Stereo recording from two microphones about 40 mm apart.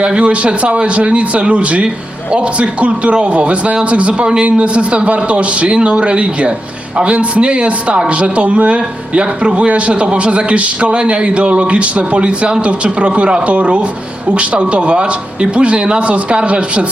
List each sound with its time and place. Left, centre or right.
0.0 s a man's voice: right